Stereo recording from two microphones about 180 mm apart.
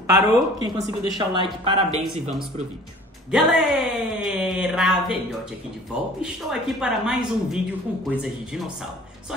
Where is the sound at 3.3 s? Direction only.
Centre (ahead or behind).